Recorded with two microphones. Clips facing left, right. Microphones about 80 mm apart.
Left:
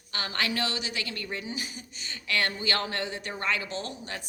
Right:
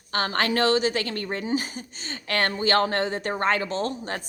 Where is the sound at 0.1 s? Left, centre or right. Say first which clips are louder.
Right 7 dB; right.